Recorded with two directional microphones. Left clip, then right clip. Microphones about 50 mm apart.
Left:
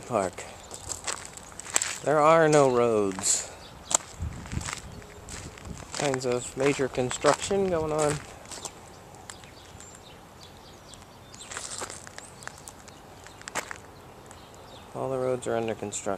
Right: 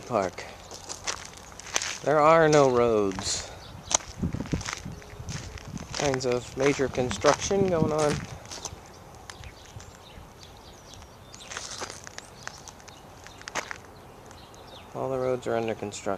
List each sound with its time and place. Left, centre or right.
0.1 s walk: centre
3.2 s speech: centre
3.9 s walk: centre
5.9 s a sound: right
6.2 s speech: centre
8.4 s a sound: right
11.4 s walk: centre
13.4 s walk: right
14.9 s a sound: centre
15.3 s speech: centre